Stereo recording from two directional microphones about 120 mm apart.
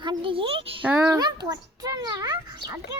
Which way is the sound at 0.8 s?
20° right (ahead or behind).